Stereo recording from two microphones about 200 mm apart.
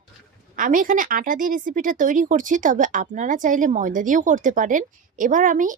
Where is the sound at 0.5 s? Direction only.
45° right (ahead or behind).